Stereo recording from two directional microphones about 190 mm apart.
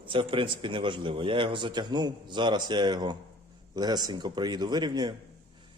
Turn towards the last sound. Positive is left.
turn(degrees=-20)  # may be behind; listen again after turning